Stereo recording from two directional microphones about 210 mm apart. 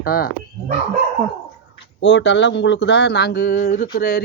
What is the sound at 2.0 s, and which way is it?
Speech, 60° left (ahead or behind).